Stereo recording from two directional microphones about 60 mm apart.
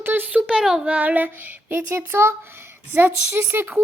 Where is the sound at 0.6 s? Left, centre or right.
Centre.